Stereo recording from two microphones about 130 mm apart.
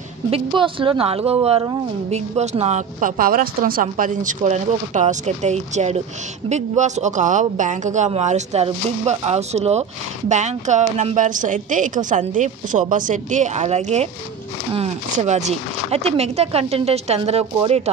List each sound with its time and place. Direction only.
0.3 s a woman's voice: 40° right (ahead or behind); by 14.0 s 55° right (ahead or behind)
15.1 s speech: 60° right (ahead or behind)